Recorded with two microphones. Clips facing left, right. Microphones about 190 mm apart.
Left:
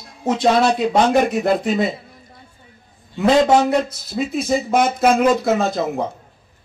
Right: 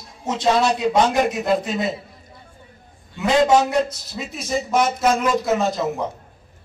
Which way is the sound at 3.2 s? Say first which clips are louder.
Left 2 dB; 55° left (ahead or behind).